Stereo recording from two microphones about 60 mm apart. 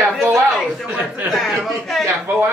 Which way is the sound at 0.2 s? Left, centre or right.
Centre.